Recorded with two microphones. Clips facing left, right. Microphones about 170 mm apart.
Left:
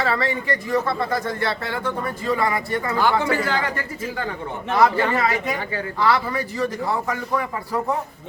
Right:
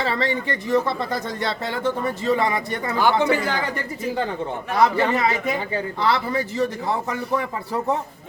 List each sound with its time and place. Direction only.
0.0 s speech: 20° right (ahead or behind)
4.8 s speech: 20° right (ahead or behind)